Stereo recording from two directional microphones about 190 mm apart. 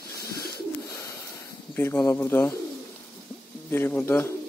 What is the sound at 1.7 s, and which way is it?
Speech, 10° left (ahead or behind).